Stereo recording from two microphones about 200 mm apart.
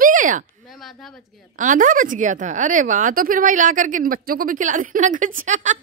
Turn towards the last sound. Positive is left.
turn(degrees=-40)  # may be behind; listen again after turning